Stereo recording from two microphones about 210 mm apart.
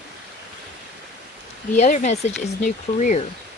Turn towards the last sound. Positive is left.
turn(degrees=35)  # may be behind; listen again after turning